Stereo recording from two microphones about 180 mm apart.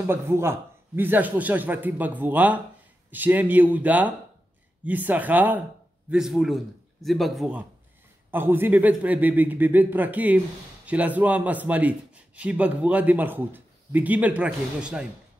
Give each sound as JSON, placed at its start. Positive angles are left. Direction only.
{"t": 0.0, "sound": "a man's voice", "side_deg": -15}